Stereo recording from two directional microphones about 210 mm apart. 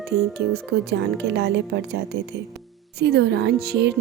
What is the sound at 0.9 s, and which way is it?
Speech, 55° right (ahead or behind).